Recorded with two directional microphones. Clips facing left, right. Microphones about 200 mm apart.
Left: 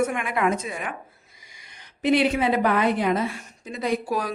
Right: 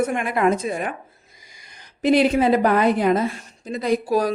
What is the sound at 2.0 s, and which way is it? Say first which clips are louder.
Speech: right 4 dB; 40° right (ahead or behind).